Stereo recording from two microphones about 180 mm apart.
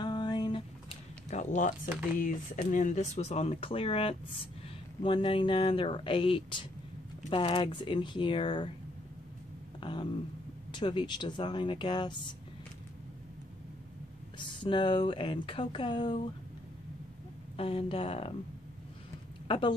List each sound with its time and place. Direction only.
0.0 s a sound: 25° left (ahead or behind)
1.3 s speech: 40° left (ahead or behind); by 8.7 s 25° left (ahead or behind)
9.8 s a sound: 25° left (ahead or behind)
10.7 s speech: 25° left (ahead or behind)
14.6 s speech: 30° left (ahead or behind)
17.6 s speech: 30° left (ahead or behind)
19.4 s speech: 30° left (ahead or behind)